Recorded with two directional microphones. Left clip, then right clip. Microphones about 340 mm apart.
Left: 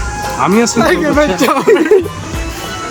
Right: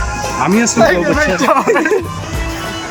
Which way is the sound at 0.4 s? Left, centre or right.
Centre.